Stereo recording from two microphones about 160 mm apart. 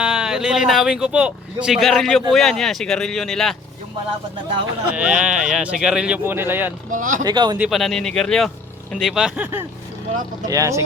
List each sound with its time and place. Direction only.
0.0 s speech: 5° right (ahead or behind)
4.9 s speech: 5° right (ahead or behind)
6.9 s speech: 55° right (ahead or behind)
7.3 s speech: 25° right (ahead or behind)
7.7 s speech: centre (ahead or behind); by 10.8 s 20° right (ahead or behind)